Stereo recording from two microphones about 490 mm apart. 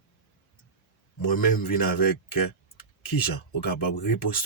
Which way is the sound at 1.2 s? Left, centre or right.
Left.